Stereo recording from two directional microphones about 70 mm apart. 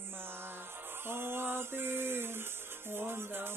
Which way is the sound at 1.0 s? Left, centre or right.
Right.